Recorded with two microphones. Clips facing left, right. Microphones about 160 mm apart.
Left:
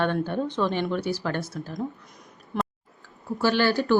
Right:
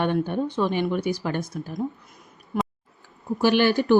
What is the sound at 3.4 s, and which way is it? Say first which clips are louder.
Speech: right 3 dB; 15° right (ahead or behind).